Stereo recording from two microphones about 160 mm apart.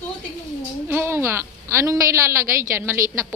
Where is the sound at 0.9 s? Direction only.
15° right (ahead or behind).